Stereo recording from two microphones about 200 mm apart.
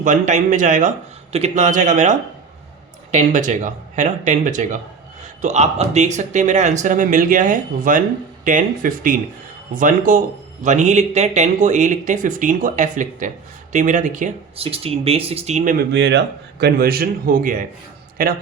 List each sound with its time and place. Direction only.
0.0 s a man's voice: 40° right (ahead or behind)
15.9 s a man's voice: 60° right (ahead or behind)